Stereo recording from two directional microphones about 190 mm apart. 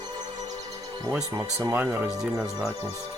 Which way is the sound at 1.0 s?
15° right (ahead or behind).